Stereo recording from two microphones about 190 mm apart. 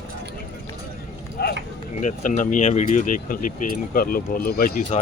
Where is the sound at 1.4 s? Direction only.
55° left (ahead or behind).